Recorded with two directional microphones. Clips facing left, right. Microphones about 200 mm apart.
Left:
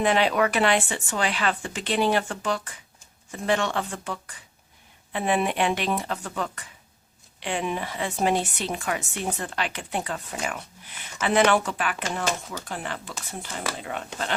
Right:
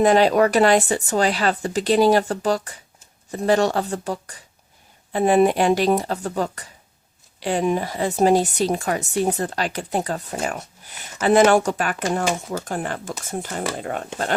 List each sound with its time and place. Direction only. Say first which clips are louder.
0.0 s speech: right 7 dB; 40° right (ahead or behind)